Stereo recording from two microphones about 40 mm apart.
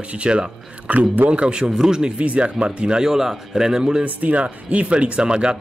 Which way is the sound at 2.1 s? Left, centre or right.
Right.